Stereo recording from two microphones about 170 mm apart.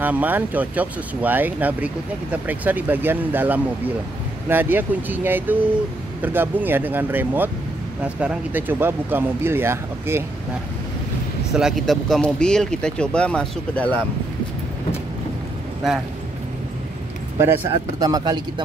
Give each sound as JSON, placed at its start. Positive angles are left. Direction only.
{"t": 0.0, "sound": "speech", "side_deg": -10}
{"t": 11.5, "sound": "speech", "side_deg": 0}
{"t": 17.4, "sound": "speech", "side_deg": -20}